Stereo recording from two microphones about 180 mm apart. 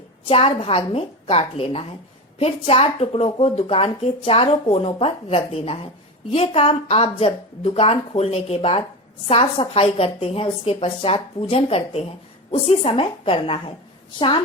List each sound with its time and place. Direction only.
0.3 s a woman's voice: 30° left (ahead or behind)